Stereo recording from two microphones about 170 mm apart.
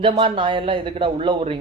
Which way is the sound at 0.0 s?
30° right (ahead or behind).